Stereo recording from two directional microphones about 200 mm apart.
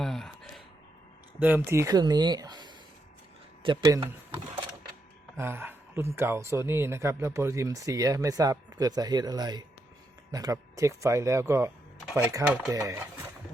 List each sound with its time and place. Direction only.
0.0 s gasp: centre (ahead or behind)
1.4 s speech: 10° right (ahead or behind)
5.4 s speech: 10° right (ahead or behind)
12.5 s speech: centre (ahead or behind)
12.7 s speech: 15° right (ahead or behind)